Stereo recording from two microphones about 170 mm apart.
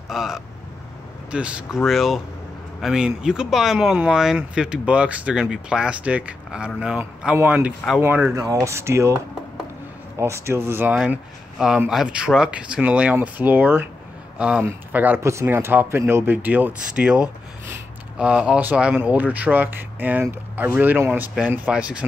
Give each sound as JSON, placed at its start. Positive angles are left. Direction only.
{"t": 0.1, "sound": "speech", "side_deg": 0}